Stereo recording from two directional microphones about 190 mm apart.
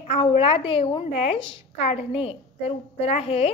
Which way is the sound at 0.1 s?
30° left (ahead or behind).